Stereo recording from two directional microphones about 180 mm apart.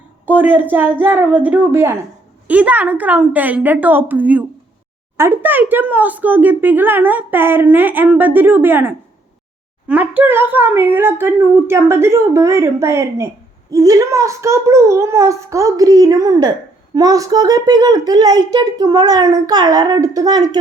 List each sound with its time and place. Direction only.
0.3 s speech: 10° right (ahead or behind)